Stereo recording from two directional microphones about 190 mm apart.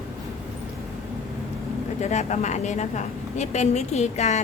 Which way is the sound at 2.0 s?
35° left (ahead or behind).